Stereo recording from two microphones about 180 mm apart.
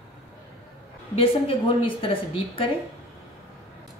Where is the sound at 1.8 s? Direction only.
30° left (ahead or behind).